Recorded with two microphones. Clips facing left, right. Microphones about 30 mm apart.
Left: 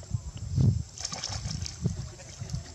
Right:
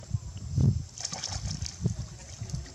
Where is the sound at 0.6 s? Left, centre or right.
Left.